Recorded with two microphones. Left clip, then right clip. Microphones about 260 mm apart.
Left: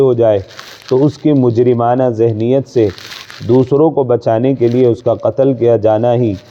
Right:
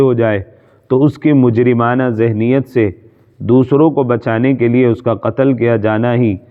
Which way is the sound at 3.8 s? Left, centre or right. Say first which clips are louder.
Left 1 dB; right.